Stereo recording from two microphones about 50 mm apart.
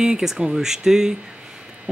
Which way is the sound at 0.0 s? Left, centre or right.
Centre.